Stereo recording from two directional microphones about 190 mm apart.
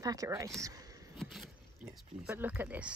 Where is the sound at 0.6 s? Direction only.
20° right (ahead or behind).